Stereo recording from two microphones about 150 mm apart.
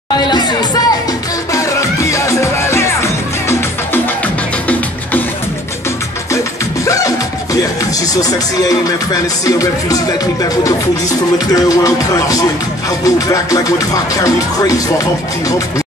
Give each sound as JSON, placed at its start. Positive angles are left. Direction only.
{"t": 0.3, "sound": "music", "side_deg": 30}
{"t": 6.9, "sound": "music", "side_deg": 20}